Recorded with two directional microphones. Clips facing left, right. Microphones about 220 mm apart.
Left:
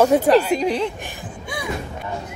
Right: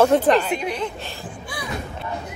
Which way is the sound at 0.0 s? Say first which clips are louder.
Left 2 dB; 10° left (ahead or behind).